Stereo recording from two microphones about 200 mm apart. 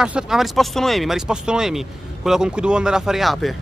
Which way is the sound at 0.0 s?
5° right (ahead or behind).